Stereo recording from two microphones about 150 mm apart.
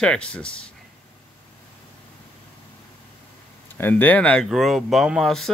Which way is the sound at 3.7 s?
15° left (ahead or behind).